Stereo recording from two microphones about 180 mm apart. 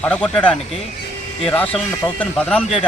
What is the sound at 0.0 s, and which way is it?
Speech, 5° left (ahead or behind).